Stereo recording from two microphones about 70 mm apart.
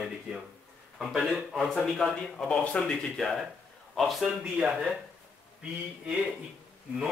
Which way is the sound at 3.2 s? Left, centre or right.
Centre.